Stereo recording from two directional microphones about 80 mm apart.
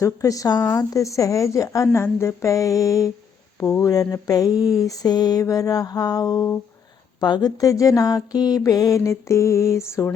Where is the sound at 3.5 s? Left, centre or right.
Left.